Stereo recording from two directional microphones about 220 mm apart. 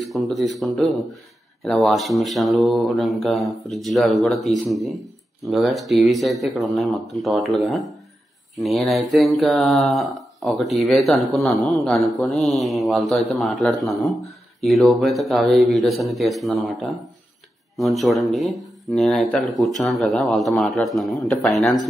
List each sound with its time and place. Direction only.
0.0 s mantra: centre (ahead or behind)